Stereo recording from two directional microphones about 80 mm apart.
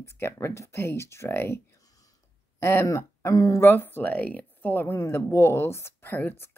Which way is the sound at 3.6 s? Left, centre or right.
Left.